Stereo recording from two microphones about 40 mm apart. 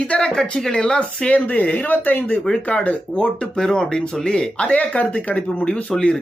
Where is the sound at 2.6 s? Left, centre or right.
Left.